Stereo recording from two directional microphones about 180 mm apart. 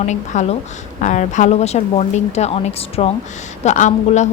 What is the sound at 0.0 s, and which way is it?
A woman's voice, 40° left (ahead or behind).